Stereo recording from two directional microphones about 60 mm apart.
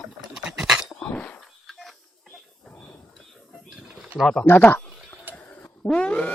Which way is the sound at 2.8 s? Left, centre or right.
Left.